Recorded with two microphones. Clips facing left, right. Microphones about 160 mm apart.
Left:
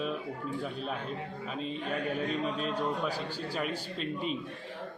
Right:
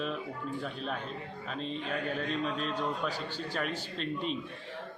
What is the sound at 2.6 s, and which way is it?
A man's voice, 10° left (ahead or behind).